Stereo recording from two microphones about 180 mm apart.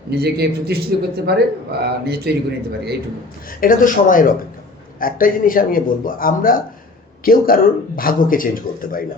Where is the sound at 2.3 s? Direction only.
65° right (ahead or behind).